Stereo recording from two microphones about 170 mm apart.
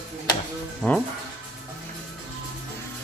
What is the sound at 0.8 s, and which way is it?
Speech, 5° left (ahead or behind).